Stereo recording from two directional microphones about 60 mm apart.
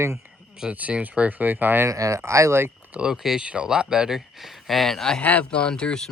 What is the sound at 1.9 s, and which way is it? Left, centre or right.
Speech, right.